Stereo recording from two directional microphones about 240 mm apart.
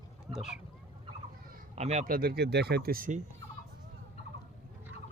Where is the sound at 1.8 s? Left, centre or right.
Right.